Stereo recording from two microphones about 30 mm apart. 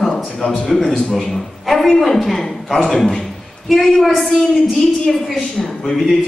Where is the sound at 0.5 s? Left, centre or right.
Centre.